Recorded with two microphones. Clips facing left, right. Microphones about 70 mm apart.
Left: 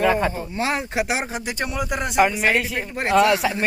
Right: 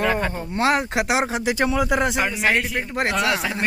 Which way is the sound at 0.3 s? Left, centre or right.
Right.